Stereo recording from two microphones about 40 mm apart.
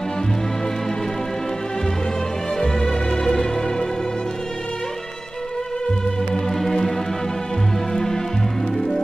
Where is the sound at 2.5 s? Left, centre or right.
Centre.